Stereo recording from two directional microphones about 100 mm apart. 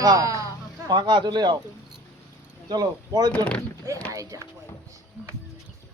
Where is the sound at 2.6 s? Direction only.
40° right (ahead or behind).